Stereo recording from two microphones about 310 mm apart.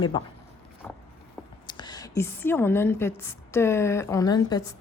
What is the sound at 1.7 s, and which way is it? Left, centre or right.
A woman's voice, centre.